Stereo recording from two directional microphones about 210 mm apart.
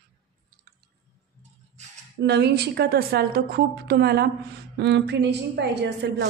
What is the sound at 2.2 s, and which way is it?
A woman's voice, 50° right (ahead or behind).